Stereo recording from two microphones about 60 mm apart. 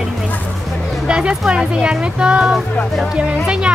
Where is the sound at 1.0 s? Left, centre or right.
Centre.